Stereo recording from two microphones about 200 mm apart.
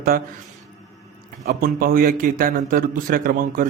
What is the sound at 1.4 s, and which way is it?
A man's voice, 50° right (ahead or behind).